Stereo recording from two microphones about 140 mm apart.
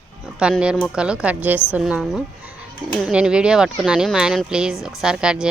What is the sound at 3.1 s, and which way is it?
Speech, 5° right (ahead or behind).